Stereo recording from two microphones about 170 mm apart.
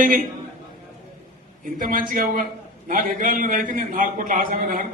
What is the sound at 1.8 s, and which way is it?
A man's voice, 55° right (ahead or behind).